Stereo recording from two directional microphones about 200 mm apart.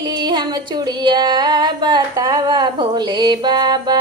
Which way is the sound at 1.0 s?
20° right (ahead or behind).